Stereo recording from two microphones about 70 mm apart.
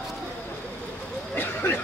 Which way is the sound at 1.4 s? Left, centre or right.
Left.